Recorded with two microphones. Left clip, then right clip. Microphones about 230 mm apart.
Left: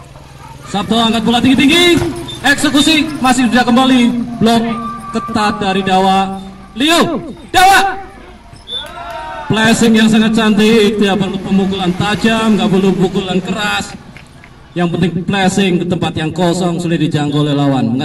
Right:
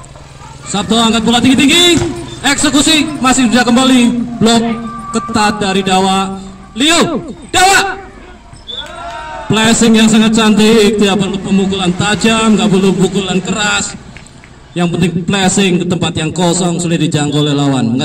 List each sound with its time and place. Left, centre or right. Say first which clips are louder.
0.7 s a man's voice: right 2 dB; right
9.5 s a man's voice: right 1 dB; right